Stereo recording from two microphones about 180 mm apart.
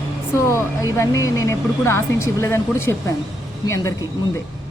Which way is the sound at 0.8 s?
15° left (ahead or behind).